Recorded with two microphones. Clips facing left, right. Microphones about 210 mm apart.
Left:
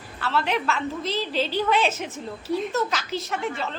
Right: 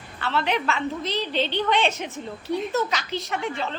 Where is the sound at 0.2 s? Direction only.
Centre (ahead or behind).